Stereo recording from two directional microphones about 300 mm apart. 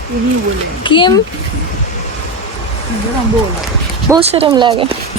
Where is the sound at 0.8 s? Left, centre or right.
Centre.